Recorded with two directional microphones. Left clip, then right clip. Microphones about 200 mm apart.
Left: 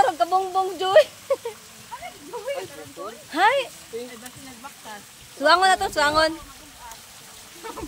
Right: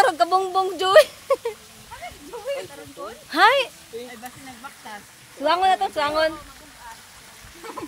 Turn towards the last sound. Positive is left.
turn(degrees=25)  # may be behind; listen again after turning